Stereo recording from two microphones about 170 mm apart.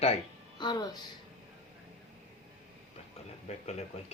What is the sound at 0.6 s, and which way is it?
Speech, 25° left (ahead or behind).